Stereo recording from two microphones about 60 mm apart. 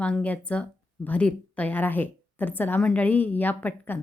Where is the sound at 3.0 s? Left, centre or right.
Left.